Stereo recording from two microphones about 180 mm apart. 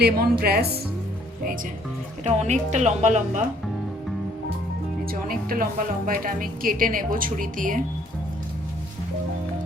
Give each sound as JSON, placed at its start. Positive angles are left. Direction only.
{"t": 0.0, "sound": "a woman's voice", "side_deg": -60}
{"t": 2.2, "sound": "speech", "side_deg": -40}
{"t": 5.3, "sound": "speech", "side_deg": -50}